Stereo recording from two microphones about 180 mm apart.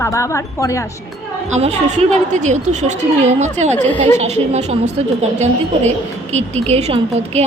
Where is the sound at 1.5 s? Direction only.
40° right (ahead or behind).